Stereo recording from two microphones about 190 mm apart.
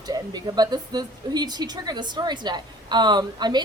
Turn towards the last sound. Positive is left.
turn(degrees=-20)  # may be behind; listen again after turning